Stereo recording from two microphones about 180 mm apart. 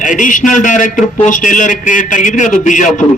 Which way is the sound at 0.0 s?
45° left (ahead or behind).